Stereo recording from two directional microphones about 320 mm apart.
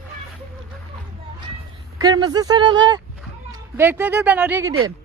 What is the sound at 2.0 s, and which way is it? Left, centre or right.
Speech, centre.